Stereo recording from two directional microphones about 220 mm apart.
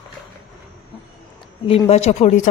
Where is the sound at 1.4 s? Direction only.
25° left (ahead or behind).